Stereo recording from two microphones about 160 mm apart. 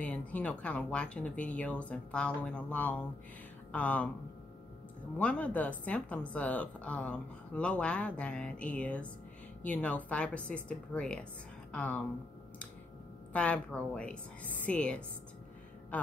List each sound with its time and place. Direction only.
0.0 s speech: 10° left (ahead or behind)
5.1 s speech: 10° left (ahead or behind)
13.3 s speech: 10° left (ahead or behind)